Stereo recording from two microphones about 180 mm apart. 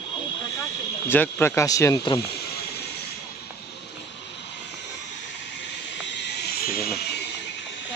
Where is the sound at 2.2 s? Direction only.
65° left (ahead or behind).